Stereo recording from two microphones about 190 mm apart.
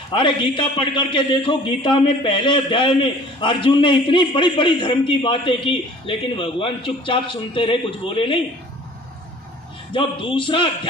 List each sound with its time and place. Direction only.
0.1 s a man's voice: 25° left (ahead or behind)
9.9 s a man's voice: 25° left (ahead or behind)